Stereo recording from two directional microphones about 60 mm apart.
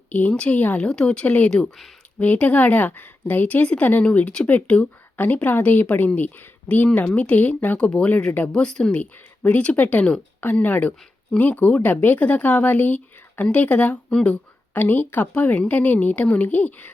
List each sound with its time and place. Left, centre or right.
0.1 s a woman's voice: left
2.1 s a woman's voice: left
9.0 s a woman's voice: left